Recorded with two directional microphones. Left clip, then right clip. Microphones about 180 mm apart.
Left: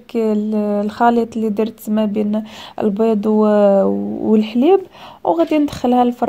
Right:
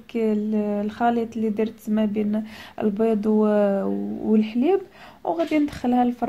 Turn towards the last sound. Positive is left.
turn(degrees=45)  # may be behind; listen again after turning